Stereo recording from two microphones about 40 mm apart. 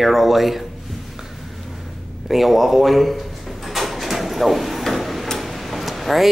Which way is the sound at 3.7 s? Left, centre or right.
Centre.